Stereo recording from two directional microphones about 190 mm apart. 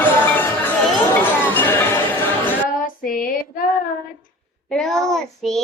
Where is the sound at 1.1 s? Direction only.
10° left (ahead or behind).